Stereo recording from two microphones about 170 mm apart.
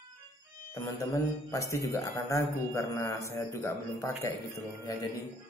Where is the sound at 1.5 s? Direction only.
20° left (ahead or behind).